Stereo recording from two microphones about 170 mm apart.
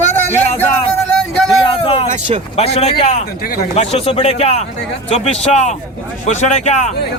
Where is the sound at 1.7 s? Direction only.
35° left (ahead or behind).